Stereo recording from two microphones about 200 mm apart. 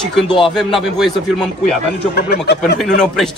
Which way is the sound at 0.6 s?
Centre (ahead or behind).